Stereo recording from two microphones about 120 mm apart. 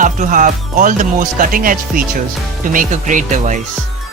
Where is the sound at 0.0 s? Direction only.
90° right.